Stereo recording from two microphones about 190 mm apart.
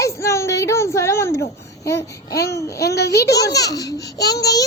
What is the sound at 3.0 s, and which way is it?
Speech, 60° left (ahead or behind).